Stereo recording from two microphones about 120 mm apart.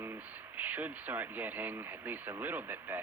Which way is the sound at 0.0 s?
15° right (ahead or behind).